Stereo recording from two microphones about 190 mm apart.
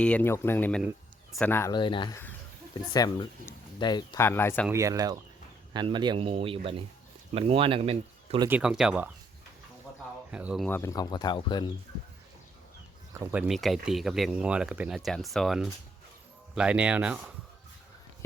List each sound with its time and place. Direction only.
0.0 s speech: 10° left (ahead or behind)
0.8 s a sound: 5° right (ahead or behind)
1.4 s speech: 10° left (ahead or behind)
1.7 s speech: 25° left (ahead or behind)
4.3 s speech: 10° left (ahead or behind)
4.7 s speech: 15° right (ahead or behind)
8.4 s speech: 5° right (ahead or behind)
10.3 s speech: 5° right (ahead or behind)
10.7 s speech: 15° left (ahead or behind)
13.1 s speech: 10° right (ahead or behind)